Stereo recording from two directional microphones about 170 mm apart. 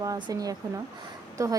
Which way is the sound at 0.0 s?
20° right (ahead or behind).